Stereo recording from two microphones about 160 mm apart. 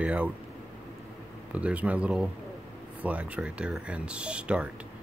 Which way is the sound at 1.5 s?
10° right (ahead or behind).